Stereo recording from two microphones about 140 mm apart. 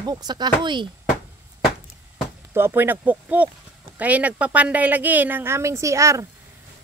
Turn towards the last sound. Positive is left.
turn(degrees=-20)  # may be behind; listen again after turning